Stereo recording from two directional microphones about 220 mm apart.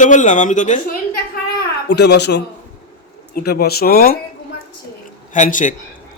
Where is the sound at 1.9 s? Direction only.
50° left (ahead or behind).